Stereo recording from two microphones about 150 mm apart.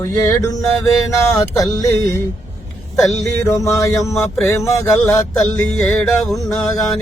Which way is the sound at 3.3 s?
20° left (ahead or behind).